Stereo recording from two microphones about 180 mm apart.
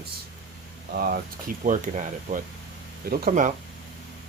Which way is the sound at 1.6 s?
45° right (ahead or behind).